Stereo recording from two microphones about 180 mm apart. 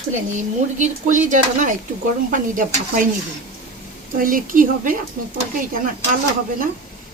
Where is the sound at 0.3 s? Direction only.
45° right (ahead or behind).